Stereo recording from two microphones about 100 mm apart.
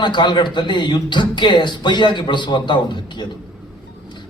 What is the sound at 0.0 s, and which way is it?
A man's voice, 50° left (ahead or behind).